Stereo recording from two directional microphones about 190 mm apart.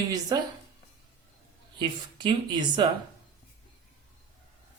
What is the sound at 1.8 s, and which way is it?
Speech, 25° right (ahead or behind).